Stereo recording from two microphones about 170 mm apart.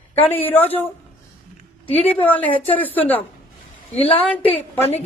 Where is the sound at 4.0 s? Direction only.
35° left (ahead or behind).